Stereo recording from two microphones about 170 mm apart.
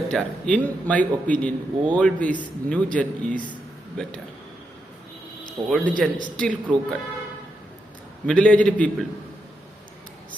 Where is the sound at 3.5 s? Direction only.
5° left (ahead or behind).